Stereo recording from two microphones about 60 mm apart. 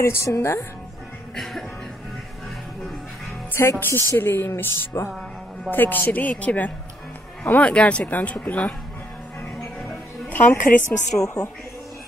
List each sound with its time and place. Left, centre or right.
0.0 s speech: left
1.3 s music: centre
3.6 s speech: left
4.2 s speech: left
10.3 s speech: left
11.2 s a woman's voice: left